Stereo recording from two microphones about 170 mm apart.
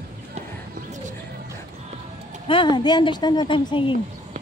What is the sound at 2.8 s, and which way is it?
A woman's voice, 25° left (ahead or behind).